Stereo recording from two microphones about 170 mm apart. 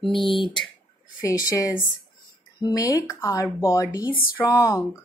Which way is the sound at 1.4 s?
20° left (ahead or behind).